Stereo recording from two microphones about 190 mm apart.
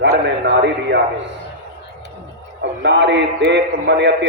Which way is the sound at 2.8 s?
65° right (ahead or behind).